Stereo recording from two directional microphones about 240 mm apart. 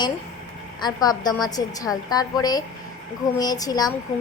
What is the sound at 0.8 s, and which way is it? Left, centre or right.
A woman's voice, centre.